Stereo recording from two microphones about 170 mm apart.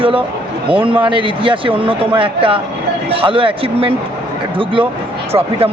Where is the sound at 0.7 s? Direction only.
30° right (ahead or behind).